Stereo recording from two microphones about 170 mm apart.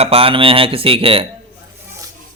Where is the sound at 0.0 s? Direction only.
35° right (ahead or behind).